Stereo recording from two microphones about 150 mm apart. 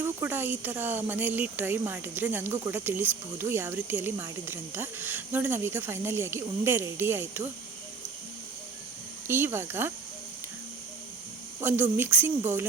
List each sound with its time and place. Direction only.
0.0 s speech: 15° right (ahead or behind)
9.2 s speech: 15° right (ahead or behind)
11.6 s speech: 15° right (ahead or behind)